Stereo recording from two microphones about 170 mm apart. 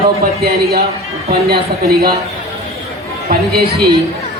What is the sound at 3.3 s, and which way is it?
Speech, 65° right (ahead or behind).